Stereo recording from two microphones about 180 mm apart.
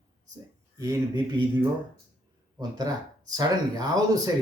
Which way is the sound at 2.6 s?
20° right (ahead or behind).